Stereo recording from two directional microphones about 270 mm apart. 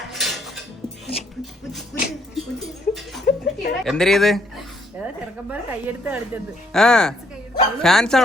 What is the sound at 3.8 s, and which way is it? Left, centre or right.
Speech, centre.